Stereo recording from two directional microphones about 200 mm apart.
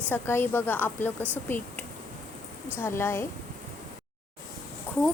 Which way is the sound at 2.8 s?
10° left (ahead or behind).